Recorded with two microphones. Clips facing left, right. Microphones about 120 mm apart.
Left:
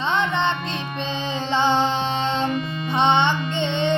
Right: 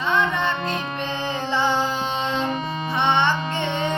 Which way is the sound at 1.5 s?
20° left (ahead or behind).